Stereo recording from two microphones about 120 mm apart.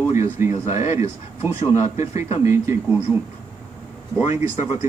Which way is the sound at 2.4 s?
25° right (ahead or behind).